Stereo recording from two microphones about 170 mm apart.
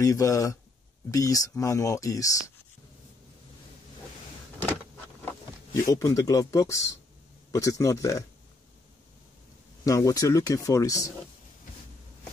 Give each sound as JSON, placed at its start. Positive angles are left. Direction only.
{"t": 0.0, "sound": "speech", "side_deg": 20}
{"t": 5.7, "sound": "speech", "side_deg": 20}
{"t": 9.8, "sound": "speech", "side_deg": 20}